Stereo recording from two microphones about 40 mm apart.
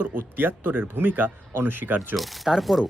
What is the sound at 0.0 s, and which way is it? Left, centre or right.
Speech, right.